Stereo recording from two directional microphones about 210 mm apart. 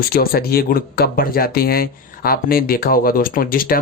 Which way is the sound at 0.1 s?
45° left (ahead or behind).